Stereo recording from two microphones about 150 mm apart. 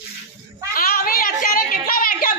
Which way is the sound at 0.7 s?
75° left (ahead or behind).